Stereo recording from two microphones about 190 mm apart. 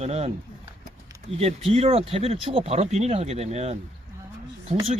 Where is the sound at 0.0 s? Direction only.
35° right (ahead or behind).